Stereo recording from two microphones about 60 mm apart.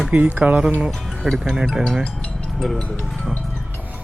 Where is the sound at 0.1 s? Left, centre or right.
Right.